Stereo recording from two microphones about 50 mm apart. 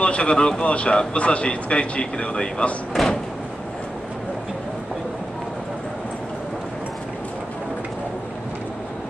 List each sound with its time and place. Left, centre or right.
0.0 s speech: left
3.0 s door: centre